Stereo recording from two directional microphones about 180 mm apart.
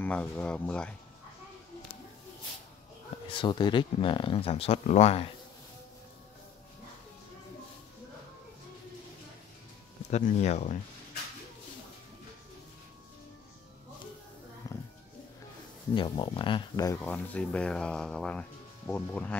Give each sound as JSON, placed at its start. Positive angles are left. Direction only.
{"t": 0.0, "sound": "speech", "side_deg": 10}
{"t": 3.3, "sound": "speech", "side_deg": 25}
{"t": 10.1, "sound": "speech", "side_deg": 40}
{"t": 14.7, "sound": "a sound", "side_deg": 20}
{"t": 15.9, "sound": "speech", "side_deg": 25}
{"t": 17.0, "sound": "speech", "side_deg": 10}